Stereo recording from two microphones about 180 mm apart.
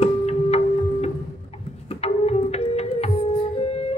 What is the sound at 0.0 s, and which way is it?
Music, 35° left (ahead or behind).